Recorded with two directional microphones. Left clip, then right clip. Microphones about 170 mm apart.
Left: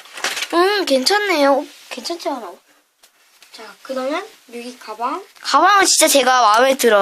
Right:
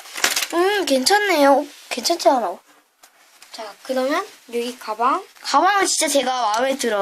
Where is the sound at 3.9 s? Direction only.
50° right (ahead or behind).